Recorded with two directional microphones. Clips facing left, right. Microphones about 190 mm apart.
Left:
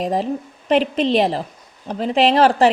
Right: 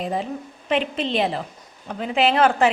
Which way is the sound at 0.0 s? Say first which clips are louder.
Left 5 dB; 40° left (ahead or behind).